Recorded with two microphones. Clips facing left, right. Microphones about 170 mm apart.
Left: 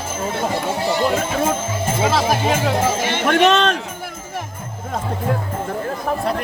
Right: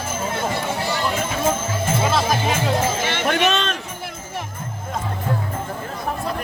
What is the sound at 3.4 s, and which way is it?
Speech, 80° left.